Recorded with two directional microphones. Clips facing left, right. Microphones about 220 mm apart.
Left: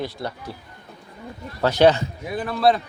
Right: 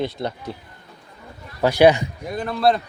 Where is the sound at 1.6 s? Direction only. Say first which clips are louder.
Right 2 dB; 10° right (ahead or behind).